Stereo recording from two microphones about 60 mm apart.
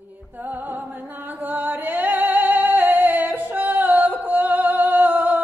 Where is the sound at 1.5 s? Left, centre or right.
Right.